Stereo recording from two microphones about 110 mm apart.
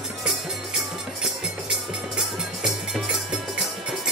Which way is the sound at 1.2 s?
5° right (ahead or behind).